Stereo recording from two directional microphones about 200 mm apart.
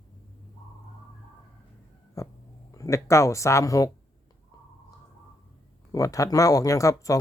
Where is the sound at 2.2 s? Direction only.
15° left (ahead or behind).